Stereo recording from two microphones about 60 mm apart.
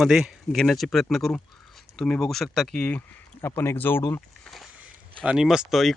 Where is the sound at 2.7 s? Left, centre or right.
Centre.